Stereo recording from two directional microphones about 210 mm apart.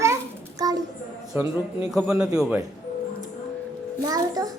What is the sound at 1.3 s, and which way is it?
A child's voice, 10° right (ahead or behind).